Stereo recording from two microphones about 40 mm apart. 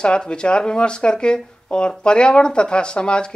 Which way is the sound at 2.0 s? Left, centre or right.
Left.